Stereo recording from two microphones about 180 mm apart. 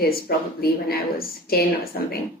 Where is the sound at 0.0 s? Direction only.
55° left (ahead or behind).